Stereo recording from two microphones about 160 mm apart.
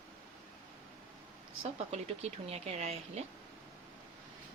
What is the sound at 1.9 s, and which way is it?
Speech, 40° right (ahead or behind).